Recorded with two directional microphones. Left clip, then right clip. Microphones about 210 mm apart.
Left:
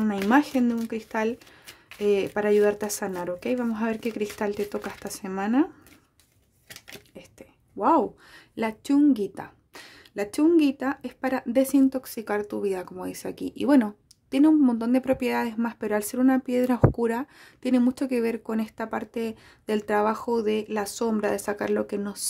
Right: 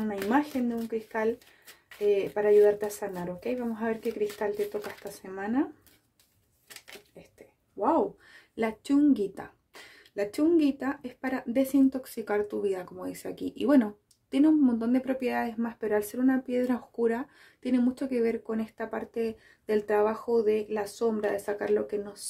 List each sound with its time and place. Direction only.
0.0 s a sound: 40° left (ahead or behind)
0.9 s speech: 40° left (ahead or behind)
7.3 s a woman's voice: 35° left (ahead or behind)